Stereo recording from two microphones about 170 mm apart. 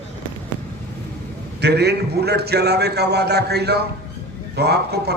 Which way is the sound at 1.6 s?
75° right (ahead or behind).